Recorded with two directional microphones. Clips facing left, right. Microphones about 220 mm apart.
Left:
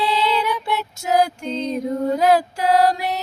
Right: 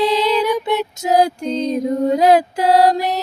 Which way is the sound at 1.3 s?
35° right (ahead or behind).